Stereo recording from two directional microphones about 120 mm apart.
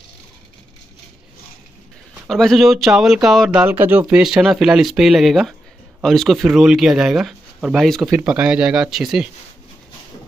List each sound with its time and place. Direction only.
2.2 s speech: 5° left (ahead or behind)
3.6 s speech: 15° right (ahead or behind)
4.1 s speech: 5° right (ahead or behind)